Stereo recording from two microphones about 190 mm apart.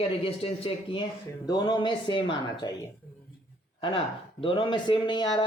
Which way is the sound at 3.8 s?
30° left (ahead or behind).